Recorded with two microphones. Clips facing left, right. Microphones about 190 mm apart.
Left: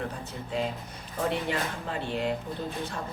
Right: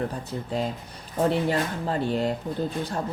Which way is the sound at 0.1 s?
35° right (ahead or behind).